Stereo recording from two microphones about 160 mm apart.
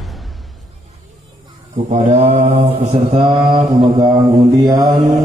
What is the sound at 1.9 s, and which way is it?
Mantra, 45° right (ahead or behind).